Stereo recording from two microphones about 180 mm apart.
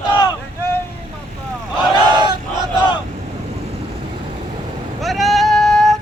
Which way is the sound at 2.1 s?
25° right (ahead or behind).